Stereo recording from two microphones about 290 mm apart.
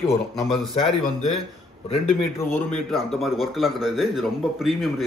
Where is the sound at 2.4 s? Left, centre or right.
Centre.